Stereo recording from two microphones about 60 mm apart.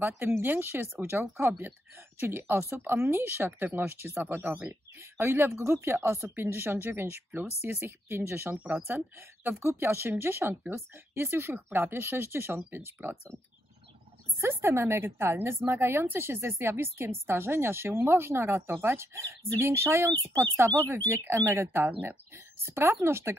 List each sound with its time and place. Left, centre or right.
0.0 s a woman's voice: right
14.4 s a woman's voice: right